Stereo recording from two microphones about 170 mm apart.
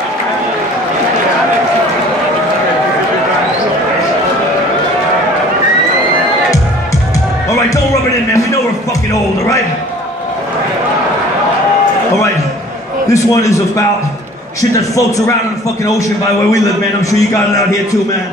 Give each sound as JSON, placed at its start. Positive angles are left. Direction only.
{"t": 13.1, "sound": "a man's voice", "side_deg": 20}